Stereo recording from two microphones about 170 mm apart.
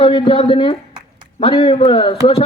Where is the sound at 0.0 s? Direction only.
30° left (ahead or behind).